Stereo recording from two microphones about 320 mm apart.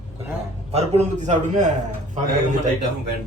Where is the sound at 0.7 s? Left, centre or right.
Centre.